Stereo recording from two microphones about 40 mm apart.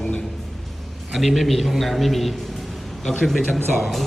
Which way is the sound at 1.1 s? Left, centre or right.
Centre.